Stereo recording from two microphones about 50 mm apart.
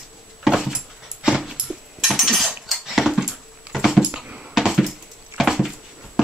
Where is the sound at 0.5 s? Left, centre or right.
Centre.